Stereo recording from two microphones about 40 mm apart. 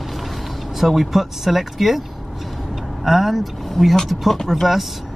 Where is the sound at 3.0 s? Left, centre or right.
Centre.